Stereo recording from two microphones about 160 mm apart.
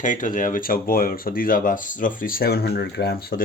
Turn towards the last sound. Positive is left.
turn(degrees=70)  # may be behind; listen again after turning